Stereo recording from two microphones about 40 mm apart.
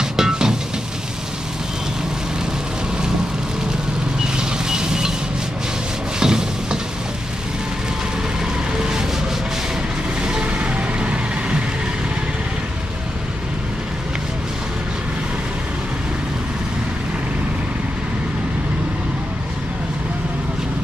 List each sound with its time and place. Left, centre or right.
0.0 s music: centre
4.2 s vehicle: centre
6.1 s rub: centre
10.4 s vehicle: right